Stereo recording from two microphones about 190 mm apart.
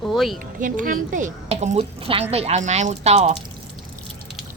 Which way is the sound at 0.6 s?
45° right (ahead or behind).